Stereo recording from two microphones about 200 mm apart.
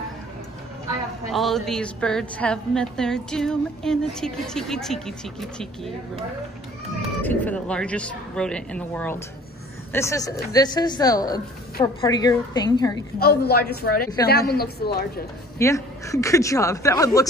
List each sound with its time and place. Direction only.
1.3 s a woman's voice: centre (ahead or behind)
7.2 s a woman's voice: 10° left (ahead or behind)
13.2 s a woman's voice: 50° left (ahead or behind)
15.6 s speech: 15° left (ahead or behind)